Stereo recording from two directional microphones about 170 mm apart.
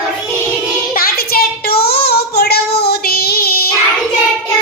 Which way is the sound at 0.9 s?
60° left (ahead or behind).